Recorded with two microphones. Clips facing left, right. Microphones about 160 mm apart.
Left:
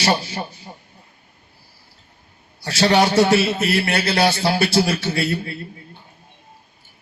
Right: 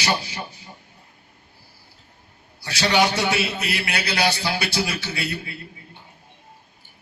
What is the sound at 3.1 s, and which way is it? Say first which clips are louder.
Speech: left 8 dB; 50° left (ahead or behind).